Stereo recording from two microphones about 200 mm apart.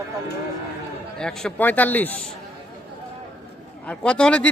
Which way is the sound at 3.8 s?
5° left (ahead or behind).